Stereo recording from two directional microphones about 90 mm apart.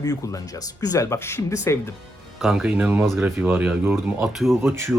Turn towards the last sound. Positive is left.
turn(degrees=-30)  # may be behind; listen again after turning